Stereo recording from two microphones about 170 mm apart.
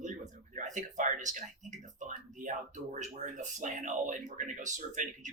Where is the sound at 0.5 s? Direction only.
45° right (ahead or behind).